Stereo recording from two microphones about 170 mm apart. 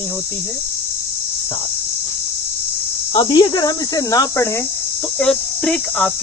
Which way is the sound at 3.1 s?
30° left (ahead or behind).